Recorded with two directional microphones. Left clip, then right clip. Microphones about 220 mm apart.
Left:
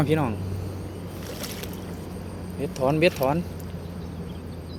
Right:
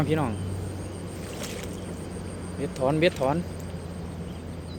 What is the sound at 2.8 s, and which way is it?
Speech, 10° left (ahead or behind).